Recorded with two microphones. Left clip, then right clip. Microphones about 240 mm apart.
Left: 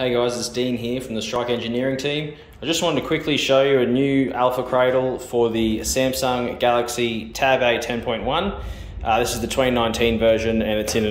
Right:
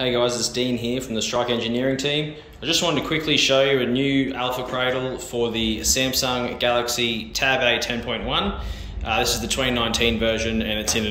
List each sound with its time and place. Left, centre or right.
0.0 s speech: centre